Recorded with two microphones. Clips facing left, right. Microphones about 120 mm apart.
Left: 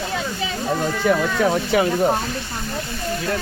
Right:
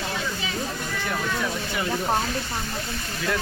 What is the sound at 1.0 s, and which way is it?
Speech, 90° left.